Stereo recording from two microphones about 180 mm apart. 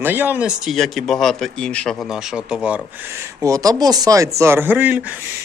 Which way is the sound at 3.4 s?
20° right (ahead or behind).